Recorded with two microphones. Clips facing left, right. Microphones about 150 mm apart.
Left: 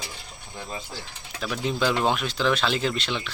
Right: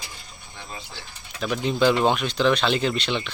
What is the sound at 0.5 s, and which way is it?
Speech, 40° left (ahead or behind).